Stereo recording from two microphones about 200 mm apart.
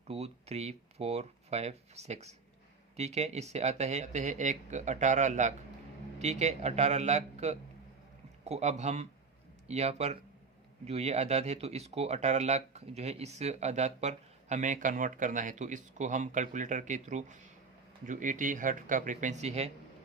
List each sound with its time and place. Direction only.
0.1 s speech: 30° right (ahead or behind)